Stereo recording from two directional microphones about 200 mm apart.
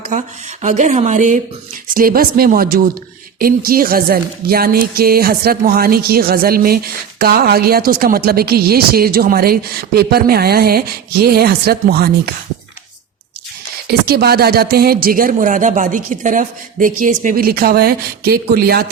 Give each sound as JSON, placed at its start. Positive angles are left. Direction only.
{"t": 0.6, "sound": "speech", "side_deg": -40}
{"t": 13.8, "sound": "speech", "side_deg": -50}